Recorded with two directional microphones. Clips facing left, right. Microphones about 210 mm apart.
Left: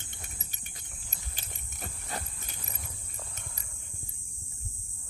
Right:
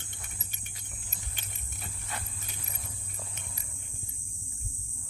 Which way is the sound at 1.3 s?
35° left (ahead or behind).